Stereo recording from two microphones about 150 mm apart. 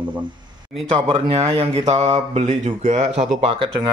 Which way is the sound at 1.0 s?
35° right (ahead or behind).